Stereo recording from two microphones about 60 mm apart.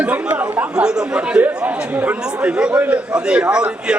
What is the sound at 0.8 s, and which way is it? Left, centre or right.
A man's voice, centre.